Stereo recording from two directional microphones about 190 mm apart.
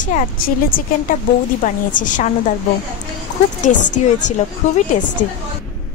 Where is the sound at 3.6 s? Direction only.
40° left (ahead or behind).